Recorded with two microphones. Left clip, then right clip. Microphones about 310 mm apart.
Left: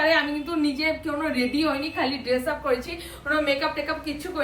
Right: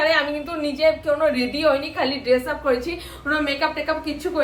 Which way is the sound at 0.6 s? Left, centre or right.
Centre.